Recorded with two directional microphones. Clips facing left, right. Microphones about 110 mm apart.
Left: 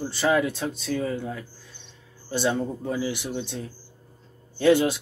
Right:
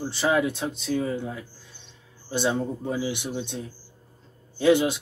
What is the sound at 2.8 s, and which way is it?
Speech, 20° right (ahead or behind).